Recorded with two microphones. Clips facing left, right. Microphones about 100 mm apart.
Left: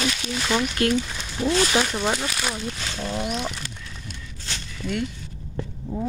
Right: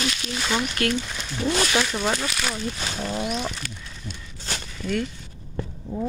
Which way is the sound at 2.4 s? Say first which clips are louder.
Even; 10° left (ahead or behind).